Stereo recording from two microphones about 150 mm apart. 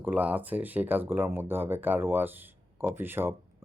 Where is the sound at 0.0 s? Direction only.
10° right (ahead or behind).